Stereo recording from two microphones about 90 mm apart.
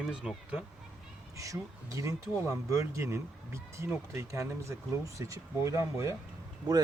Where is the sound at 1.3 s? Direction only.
35° right (ahead or behind).